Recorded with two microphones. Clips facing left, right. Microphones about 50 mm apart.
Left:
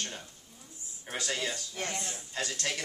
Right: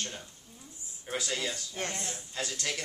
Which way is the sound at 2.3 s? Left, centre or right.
Centre.